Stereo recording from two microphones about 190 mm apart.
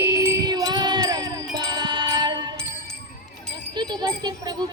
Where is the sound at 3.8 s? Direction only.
20° right (ahead or behind).